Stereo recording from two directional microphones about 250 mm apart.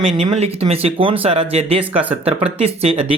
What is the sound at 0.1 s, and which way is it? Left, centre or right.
Speech, right.